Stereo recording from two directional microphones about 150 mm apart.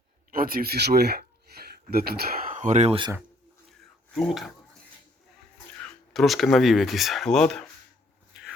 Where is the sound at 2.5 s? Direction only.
55° right (ahead or behind).